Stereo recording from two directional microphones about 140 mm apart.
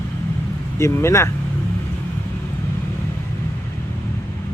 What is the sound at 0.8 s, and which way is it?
Speech, 20° left (ahead or behind).